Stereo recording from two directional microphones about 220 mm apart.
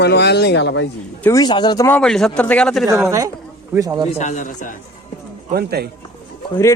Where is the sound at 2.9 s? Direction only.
15° right (ahead or behind).